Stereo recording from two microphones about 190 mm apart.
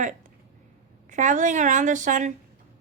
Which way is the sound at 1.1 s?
40° right (ahead or behind).